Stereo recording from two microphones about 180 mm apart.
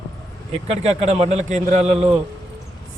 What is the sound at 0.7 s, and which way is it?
A man's voice, 35° right (ahead or behind).